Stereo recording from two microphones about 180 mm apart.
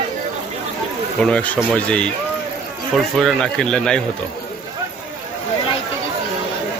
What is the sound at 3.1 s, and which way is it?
Speech, 5° left (ahead or behind).